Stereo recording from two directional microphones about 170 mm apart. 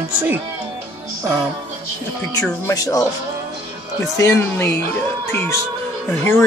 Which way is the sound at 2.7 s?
20° left (ahead or behind).